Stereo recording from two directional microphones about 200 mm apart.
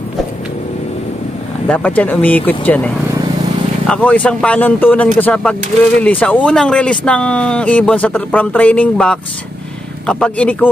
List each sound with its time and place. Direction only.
1.7 s speech: 10° left (ahead or behind)